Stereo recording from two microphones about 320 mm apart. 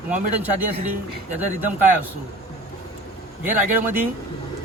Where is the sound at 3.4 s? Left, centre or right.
Centre.